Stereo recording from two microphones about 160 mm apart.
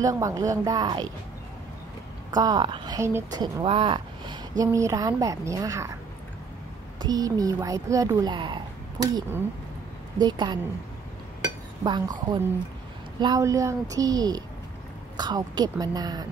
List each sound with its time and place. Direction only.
0.0 s a woman's voice: 20° right (ahead or behind)
2.3 s a woman's voice: 25° right (ahead or behind)
3.6 s speech: 30° right (ahead or behind)
4.6 s a woman's voice: 20° right (ahead or behind)
7.0 s a woman's voice: 25° right (ahead or behind)
11.8 s a woman's voice: 25° right (ahead or behind)